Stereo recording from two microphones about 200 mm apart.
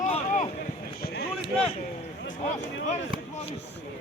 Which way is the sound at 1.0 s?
55° left (ahead or behind).